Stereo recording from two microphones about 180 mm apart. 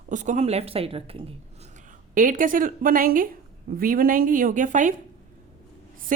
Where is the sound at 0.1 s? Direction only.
45° right (ahead or behind).